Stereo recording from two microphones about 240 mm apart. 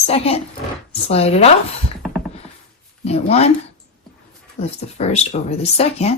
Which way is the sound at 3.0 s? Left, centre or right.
Left.